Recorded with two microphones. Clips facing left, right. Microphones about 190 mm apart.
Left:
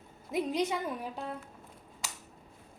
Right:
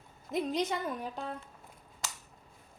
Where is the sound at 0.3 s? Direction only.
10° left (ahead or behind).